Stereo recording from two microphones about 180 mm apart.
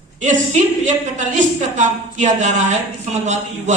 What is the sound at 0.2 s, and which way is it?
A woman's voice, 45° right (ahead or behind).